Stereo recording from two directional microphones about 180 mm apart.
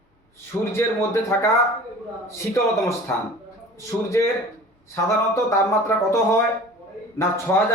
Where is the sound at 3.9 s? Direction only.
20° left (ahead or behind).